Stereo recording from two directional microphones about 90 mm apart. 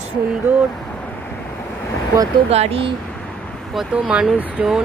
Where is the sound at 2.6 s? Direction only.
90° right.